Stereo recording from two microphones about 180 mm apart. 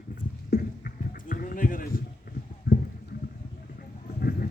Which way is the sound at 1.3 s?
50° left (ahead or behind).